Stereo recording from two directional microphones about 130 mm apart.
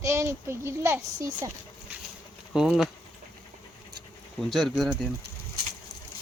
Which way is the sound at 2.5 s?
5° right (ahead or behind).